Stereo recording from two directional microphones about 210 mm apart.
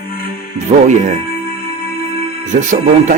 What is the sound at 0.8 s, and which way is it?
Speech, 35° right (ahead or behind).